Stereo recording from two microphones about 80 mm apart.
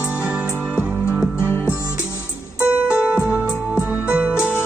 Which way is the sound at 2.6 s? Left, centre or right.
Centre.